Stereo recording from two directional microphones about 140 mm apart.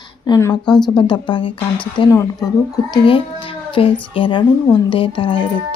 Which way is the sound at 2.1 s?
25° left (ahead or behind).